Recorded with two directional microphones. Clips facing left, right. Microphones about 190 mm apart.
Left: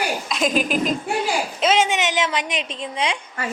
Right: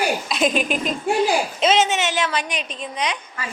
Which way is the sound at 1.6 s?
10° left (ahead or behind).